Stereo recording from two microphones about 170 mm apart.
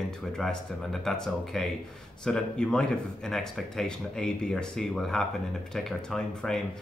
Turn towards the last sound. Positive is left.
turn(degrees=0)  # may be behind; listen again after turning